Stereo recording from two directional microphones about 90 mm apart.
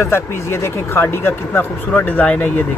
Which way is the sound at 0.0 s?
30° left (ahead or behind).